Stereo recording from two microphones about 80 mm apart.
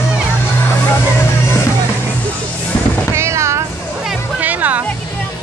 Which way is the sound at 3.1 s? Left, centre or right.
Right.